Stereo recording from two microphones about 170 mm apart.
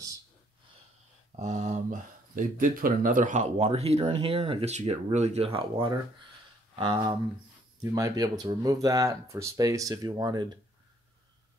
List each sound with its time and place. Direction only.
1.3 s speech: 40° right (ahead or behind)
3.5 s speech: 35° right (ahead or behind)